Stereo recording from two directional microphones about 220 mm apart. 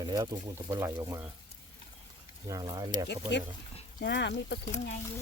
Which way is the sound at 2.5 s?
15° right (ahead or behind).